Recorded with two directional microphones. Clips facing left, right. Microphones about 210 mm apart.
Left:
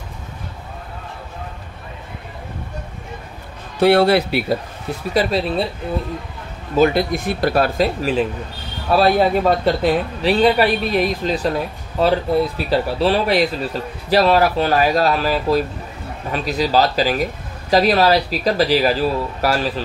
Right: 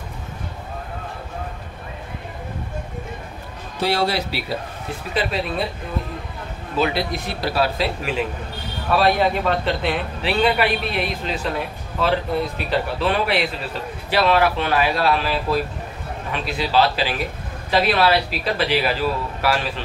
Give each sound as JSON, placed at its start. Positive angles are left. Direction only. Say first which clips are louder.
{"t": 3.8, "sound": "speech", "louder": "left 8 dB", "side_deg": 60}
{"t": 5.1, "sound": "a man's voice", "louder": "left 5 dB", "side_deg": 35}
{"t": 6.8, "sound": "a man's voice", "louder": "left 6 dB", "side_deg": 45}